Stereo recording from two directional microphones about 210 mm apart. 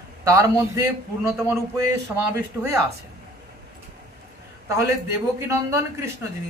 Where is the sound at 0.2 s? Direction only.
15° right (ahead or behind).